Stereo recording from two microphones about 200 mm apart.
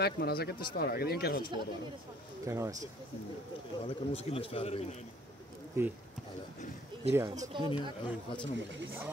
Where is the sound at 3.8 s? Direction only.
30° left (ahead or behind).